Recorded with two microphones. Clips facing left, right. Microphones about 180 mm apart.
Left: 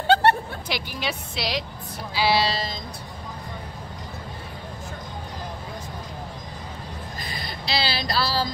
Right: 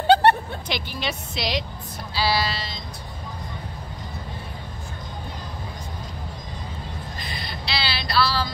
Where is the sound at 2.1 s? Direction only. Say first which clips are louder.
Left 2 dB; 20° left (ahead or behind).